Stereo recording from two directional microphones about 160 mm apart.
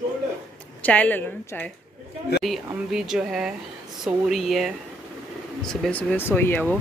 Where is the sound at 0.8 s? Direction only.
10° left (ahead or behind).